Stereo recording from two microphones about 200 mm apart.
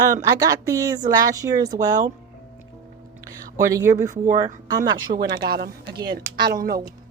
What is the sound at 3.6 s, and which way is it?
Speech, 15° right (ahead or behind).